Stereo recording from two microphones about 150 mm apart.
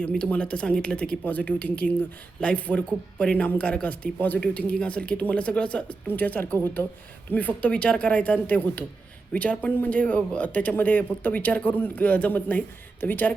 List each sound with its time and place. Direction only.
0.0 s speech: 5° left (ahead or behind)